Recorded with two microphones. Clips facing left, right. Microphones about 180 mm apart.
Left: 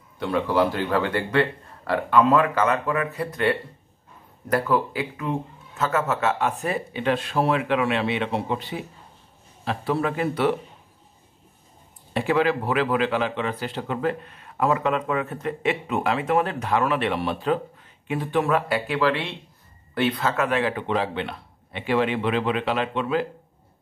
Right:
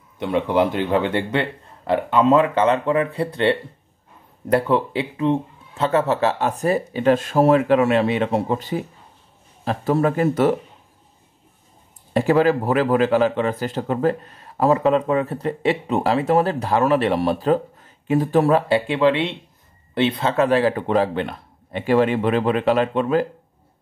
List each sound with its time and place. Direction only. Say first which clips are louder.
0.2 s speech: right 3 dB; 20° right (ahead or behind); by 10.5 s 45° right (ahead or behind)
12.1 s speech: right 5 dB; 40° right (ahead or behind)